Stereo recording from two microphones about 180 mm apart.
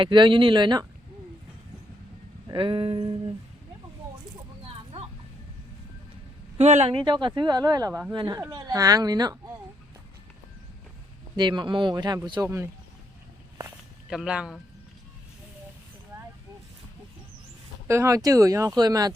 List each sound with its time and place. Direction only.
0.0 s speech: 25° right (ahead or behind)
2.5 s speech: 25° right (ahead or behind)
6.6 s speech: 40° right (ahead or behind); by 9.4 s 20° right (ahead or behind)
11.3 s speech: 25° right (ahead or behind)
14.1 s speech: 5° right (ahead or behind)
17.8 s speech: 15° right (ahead or behind)